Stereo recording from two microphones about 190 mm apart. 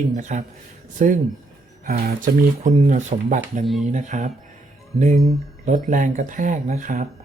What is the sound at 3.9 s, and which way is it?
Speech, 40° right (ahead or behind).